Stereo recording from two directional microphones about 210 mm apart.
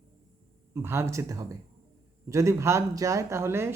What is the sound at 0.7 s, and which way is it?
Speech, 10° right (ahead or behind).